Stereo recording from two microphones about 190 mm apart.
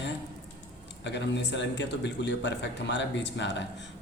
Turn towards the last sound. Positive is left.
turn(degrees=65)  # may be behind; listen again after turning